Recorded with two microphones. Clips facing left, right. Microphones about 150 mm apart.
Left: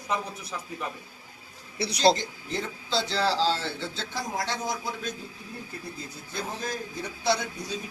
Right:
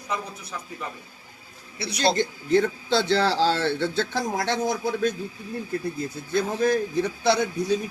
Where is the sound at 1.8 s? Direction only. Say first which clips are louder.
Left 2 dB; 40° left (ahead or behind).